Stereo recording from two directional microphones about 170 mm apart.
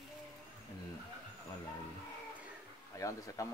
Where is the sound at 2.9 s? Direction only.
20° left (ahead or behind).